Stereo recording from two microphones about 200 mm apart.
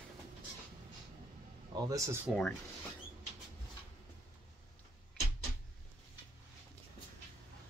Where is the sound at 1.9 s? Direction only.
15° right (ahead or behind).